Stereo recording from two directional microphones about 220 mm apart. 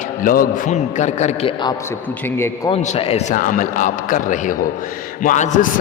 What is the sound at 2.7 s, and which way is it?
A man's voice, 25° left (ahead or behind).